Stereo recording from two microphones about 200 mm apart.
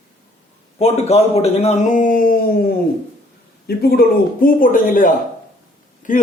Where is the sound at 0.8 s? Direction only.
30° left (ahead or behind).